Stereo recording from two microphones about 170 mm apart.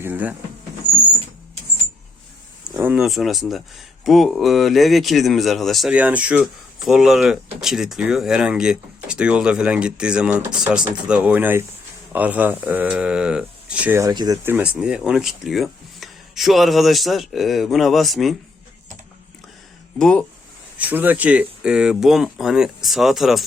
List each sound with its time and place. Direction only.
0.0 s speech: 10° right (ahead or behind)
2.7 s speech: 10° right (ahead or behind)
14.0 s speech: 25° right (ahead or behind)
14.4 s speech: 10° right (ahead or behind)
20.0 s speech: 5° left (ahead or behind)
20.7 s speech: 10° right (ahead or behind)